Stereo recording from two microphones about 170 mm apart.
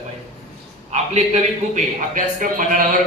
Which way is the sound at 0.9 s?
40° right (ahead or behind).